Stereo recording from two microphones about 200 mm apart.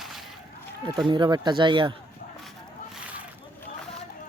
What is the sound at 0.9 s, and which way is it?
Speech, 20° right (ahead or behind).